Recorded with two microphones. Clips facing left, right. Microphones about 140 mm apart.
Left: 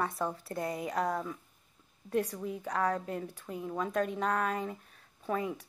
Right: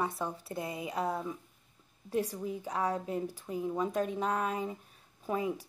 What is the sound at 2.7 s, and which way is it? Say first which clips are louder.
Speech: left 2 dB; 15° right (ahead or behind).